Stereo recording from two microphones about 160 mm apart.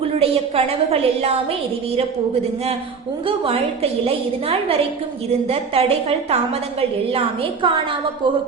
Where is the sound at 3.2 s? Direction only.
35° right (ahead or behind).